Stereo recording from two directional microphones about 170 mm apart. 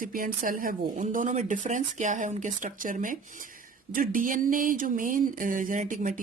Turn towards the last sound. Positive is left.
turn(degrees=-50)  # may be behind; listen again after turning